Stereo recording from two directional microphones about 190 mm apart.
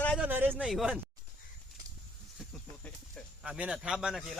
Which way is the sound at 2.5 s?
5° left (ahead or behind).